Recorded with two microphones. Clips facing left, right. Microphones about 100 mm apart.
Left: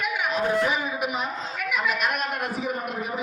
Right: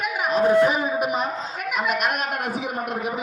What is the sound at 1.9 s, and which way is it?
Speech, 65° right (ahead or behind).